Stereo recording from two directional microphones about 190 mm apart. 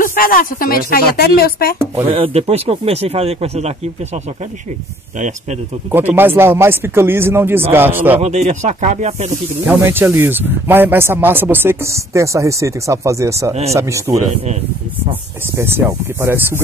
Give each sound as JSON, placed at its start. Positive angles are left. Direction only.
{"t": 0.0, "sound": "speech", "side_deg": 50}
{"t": 2.0, "sound": "speech", "side_deg": -30}
{"t": 5.9, "sound": "speech", "side_deg": -10}
{"t": 8.2, "sound": "speech", "side_deg": -35}
{"t": 9.7, "sound": "speech", "side_deg": -15}
{"t": 14.3, "sound": "speech", "side_deg": -35}
{"t": 15.5, "sound": "speech", "side_deg": -10}